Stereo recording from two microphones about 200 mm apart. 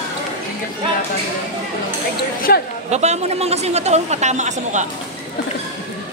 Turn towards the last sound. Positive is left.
turn(degrees=-35)  # may be behind; listen again after turning